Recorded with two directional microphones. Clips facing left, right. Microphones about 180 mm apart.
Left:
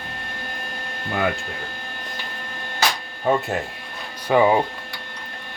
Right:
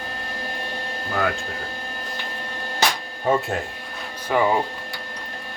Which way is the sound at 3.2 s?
Centre (ahead or behind).